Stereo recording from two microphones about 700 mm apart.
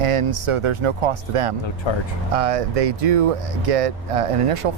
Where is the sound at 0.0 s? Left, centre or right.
Right.